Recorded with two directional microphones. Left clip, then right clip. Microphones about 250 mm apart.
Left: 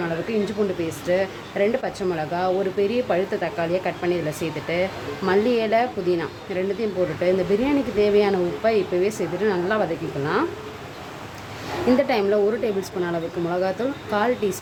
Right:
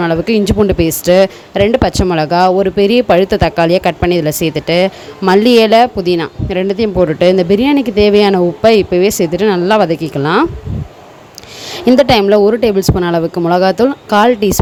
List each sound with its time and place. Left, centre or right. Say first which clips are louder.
0.0 s speech: right 12 dB; right
12.0 s speech: right 12 dB; right